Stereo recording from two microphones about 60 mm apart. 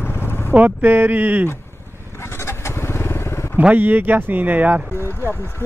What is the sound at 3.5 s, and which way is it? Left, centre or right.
Speech, right.